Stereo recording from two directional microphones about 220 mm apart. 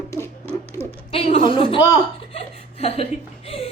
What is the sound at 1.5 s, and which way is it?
Chuckle, 25° left (ahead or behind).